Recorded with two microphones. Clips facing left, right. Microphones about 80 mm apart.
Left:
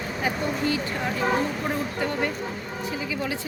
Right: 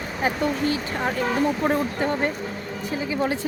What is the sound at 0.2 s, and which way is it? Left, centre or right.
A woman's voice, right.